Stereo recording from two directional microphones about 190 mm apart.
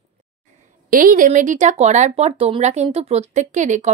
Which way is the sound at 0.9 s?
45° right (ahead or behind).